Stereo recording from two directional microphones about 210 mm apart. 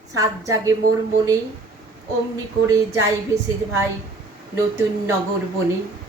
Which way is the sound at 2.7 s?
15° right (ahead or behind).